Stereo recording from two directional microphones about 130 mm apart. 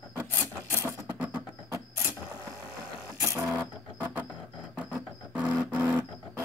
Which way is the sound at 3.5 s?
15° right (ahead or behind).